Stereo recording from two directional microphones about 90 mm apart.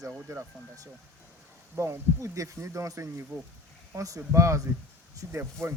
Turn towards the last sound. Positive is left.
turn(degrees=-30)  # may be behind; listen again after turning